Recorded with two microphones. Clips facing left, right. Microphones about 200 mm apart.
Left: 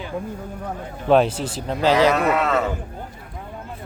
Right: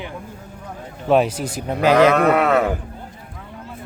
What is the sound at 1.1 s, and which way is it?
Speech, 5° right (ahead or behind).